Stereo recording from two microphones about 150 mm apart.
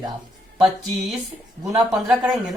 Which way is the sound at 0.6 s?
5° right (ahead or behind).